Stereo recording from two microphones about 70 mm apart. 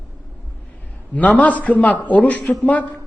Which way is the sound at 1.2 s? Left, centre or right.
Left.